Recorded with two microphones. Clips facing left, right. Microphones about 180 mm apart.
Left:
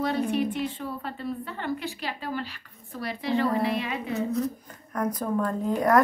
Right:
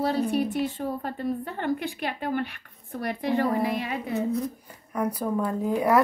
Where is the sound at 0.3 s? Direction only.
40° right (ahead or behind).